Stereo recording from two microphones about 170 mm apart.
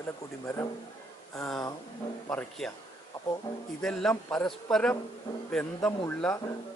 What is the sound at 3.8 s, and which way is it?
Speech, 5° left (ahead or behind).